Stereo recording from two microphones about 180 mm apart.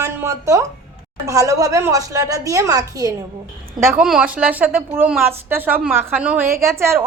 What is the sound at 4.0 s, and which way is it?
Speech, 5° right (ahead or behind).